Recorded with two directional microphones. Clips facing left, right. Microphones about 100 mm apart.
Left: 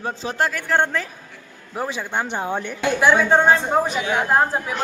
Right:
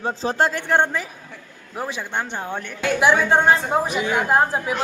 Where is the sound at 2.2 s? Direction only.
15° left (ahead or behind).